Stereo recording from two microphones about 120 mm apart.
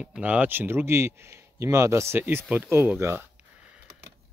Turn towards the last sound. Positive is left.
turn(degrees=-20)  # may be behind; listen again after turning